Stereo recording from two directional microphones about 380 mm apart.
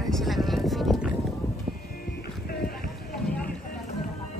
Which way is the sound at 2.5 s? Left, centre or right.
Left.